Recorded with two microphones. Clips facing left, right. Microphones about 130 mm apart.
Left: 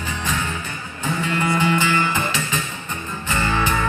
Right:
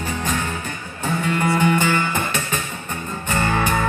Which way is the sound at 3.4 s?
50° right (ahead or behind).